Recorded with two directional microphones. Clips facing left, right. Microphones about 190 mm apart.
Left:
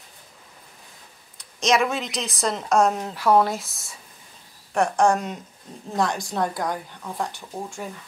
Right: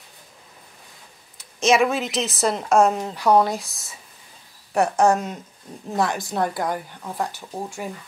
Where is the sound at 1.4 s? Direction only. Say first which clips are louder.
Right 3 dB; 5° right (ahead or behind).